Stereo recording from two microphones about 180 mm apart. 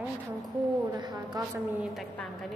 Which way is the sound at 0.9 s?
20° right (ahead or behind).